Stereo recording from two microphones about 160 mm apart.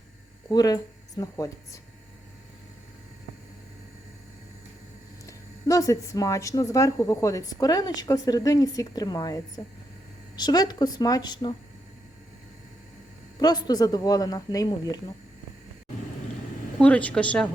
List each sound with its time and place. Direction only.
0.4 s speech: 25° left (ahead or behind)
5.2 s speech: 20° left (ahead or behind)
13.4 s speech: 25° left (ahead or behind)
16.7 s a woman's voice: 10° left (ahead or behind)